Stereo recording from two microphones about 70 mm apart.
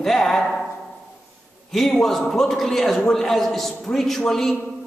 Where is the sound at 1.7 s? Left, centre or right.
Centre.